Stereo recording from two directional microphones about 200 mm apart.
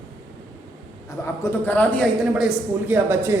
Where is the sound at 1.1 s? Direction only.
10° left (ahead or behind).